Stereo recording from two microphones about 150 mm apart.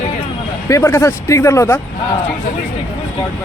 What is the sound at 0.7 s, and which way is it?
Speech, 15° left (ahead or behind).